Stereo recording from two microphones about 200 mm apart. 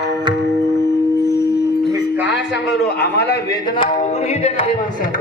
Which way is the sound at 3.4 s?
20° left (ahead or behind).